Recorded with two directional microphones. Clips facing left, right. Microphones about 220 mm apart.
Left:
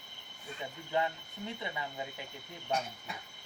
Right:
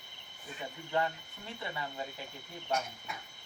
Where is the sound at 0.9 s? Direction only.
15° left (ahead or behind).